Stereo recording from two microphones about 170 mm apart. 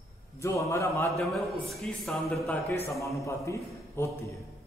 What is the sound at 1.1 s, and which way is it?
A man's voice, centre (ahead or behind).